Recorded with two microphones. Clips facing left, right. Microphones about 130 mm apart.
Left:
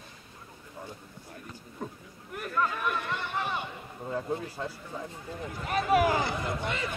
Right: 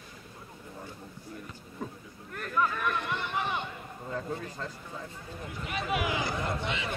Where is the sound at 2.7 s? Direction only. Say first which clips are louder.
Even; 10° left (ahead or behind).